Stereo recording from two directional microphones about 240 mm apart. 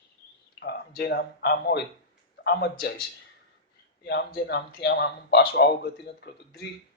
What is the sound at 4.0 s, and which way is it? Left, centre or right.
A man's voice, left.